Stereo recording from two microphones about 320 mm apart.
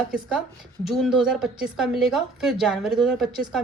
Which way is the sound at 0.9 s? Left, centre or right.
Centre.